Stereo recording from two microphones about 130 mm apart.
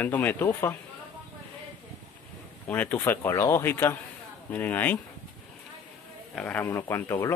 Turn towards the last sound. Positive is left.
turn(degrees=20)  # may be behind; listen again after turning